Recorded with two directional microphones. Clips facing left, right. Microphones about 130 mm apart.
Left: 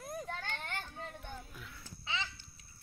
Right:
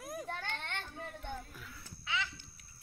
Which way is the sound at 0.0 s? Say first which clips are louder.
Even; 10° right (ahead or behind).